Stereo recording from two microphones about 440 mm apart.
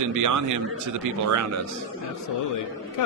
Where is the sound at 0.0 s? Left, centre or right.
Right.